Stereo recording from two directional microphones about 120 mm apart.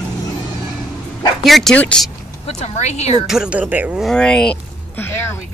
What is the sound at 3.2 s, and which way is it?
Speech, 5° right (ahead or behind).